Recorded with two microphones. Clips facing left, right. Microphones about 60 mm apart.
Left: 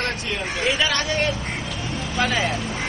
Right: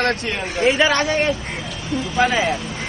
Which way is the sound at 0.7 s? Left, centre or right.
Right.